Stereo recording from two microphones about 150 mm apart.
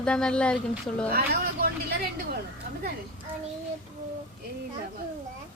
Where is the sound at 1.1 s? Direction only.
90° right.